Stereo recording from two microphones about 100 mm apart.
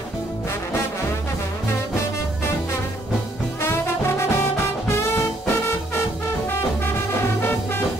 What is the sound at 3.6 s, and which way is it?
Brass instrument, 25° left (ahead or behind).